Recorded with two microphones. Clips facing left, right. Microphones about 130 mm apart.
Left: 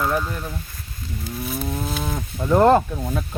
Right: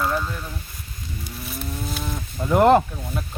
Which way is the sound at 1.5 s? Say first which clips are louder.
Left 3 dB; 55° left (ahead or behind).